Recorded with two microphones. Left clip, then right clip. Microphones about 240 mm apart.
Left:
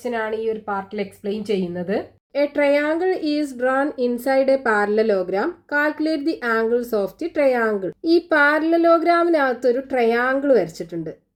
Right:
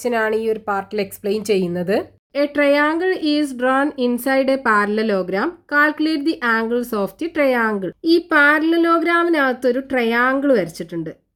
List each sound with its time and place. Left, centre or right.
0.0 s speech: right
3.1 s speech: centre
3.6 s speech: right